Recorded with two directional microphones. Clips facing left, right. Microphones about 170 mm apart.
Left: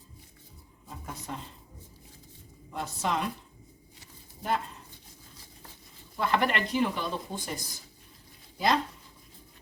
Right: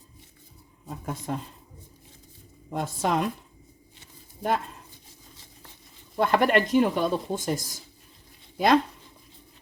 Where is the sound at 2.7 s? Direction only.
50° right (ahead or behind).